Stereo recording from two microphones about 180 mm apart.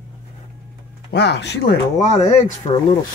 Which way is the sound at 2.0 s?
35° left (ahead or behind).